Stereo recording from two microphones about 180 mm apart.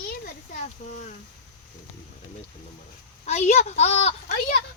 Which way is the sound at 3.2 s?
40° left (ahead or behind).